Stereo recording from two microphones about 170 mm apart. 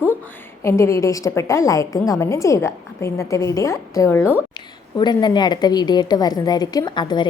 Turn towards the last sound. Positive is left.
turn(degrees=25)  # may be behind; listen again after turning